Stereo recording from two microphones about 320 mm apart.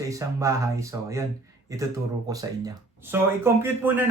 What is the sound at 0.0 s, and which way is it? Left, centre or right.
Speech, centre.